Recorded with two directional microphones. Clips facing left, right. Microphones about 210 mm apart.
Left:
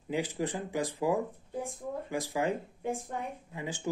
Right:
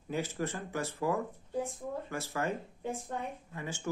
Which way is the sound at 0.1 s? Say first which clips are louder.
Left 3 dB; 15° left (ahead or behind).